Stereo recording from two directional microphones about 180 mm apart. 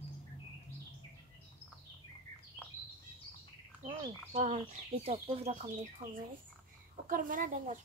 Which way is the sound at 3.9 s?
30° right (ahead or behind).